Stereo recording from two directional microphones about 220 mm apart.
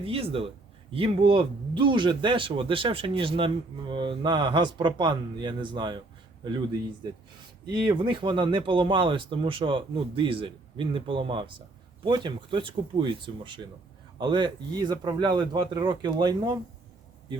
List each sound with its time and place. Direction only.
0.0 s speech: 25° right (ahead or behind)